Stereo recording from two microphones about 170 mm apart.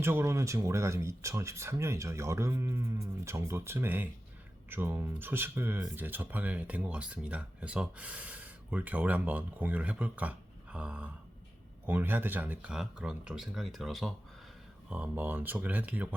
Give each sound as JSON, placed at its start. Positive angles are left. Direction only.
{"t": 0.0, "sound": "speech", "side_deg": -15}